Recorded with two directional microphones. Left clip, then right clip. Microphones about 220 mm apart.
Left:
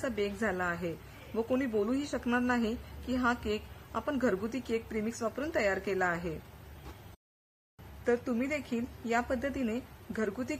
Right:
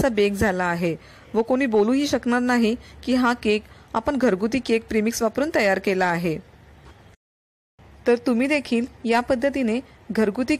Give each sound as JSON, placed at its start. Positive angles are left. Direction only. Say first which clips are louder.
{"t": 0.0, "sound": "a woman's voice", "louder": "right 13 dB", "side_deg": -30}
{"t": 8.0, "sound": "a woman's voice", "louder": "right 11 dB", "side_deg": -25}